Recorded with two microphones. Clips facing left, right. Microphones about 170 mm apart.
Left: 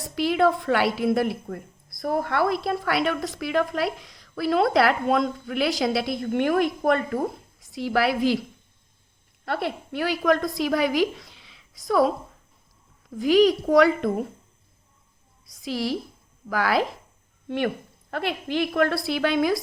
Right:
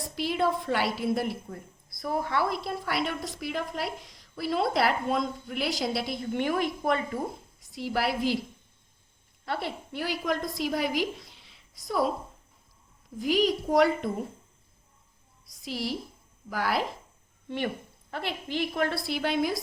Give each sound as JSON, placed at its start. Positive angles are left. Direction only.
{"t": 0.2, "sound": "a woman's voice", "side_deg": 70}
{"t": 7.8, "sound": "a woman's voice", "side_deg": 90}
{"t": 9.5, "sound": "a woman's voice", "side_deg": 60}
{"t": 13.1, "sound": "a child's voice", "side_deg": 90}
{"t": 15.6, "sound": "a woman's voice", "side_deg": 90}
{"t": 18.1, "sound": "a woman's voice", "side_deg": 60}